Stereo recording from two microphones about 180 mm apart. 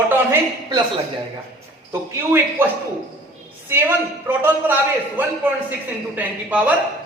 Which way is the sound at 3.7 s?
10° right (ahead or behind).